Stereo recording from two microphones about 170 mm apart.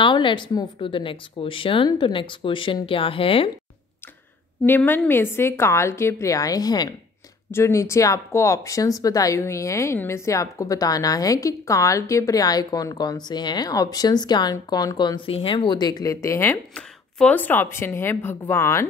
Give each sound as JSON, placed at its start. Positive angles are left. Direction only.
{"t": 0.0, "sound": "speech", "side_deg": 30}
{"t": 4.6, "sound": "a woman's voice", "side_deg": 10}